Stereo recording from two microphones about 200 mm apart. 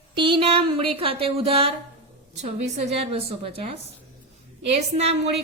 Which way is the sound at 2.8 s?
30° right (ahead or behind).